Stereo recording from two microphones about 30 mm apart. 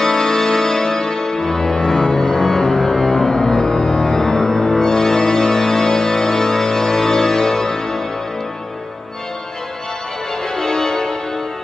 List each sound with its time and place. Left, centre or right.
0.0 s music: centre
10.5 s music: left